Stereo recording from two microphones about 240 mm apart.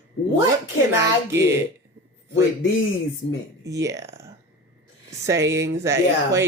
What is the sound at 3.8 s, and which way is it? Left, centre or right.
Speech, centre.